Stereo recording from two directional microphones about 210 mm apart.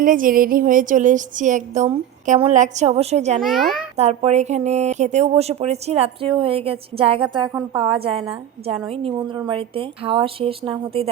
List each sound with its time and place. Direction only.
0.0 s a sound: 40° right (ahead or behind)
3.4 s a child's voice: centre (ahead or behind)
3.9 s speech: 30° right (ahead or behind)